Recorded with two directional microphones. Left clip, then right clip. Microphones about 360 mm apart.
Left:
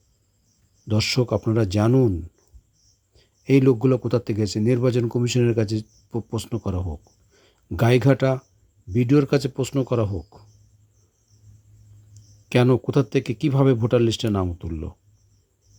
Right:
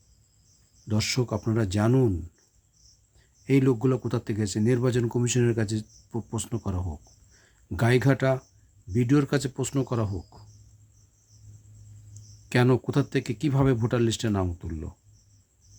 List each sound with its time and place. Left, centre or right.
0.9 s speech: centre
3.2 s speech: centre
12.5 s speech: centre